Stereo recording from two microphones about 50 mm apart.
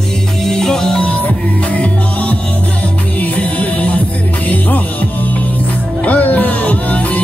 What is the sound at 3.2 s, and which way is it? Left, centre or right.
Music, left.